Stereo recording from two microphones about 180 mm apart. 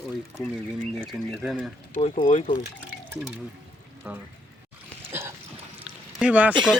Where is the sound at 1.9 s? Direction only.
40° left (ahead or behind).